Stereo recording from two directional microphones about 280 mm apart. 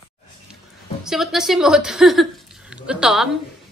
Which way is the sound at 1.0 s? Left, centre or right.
Centre.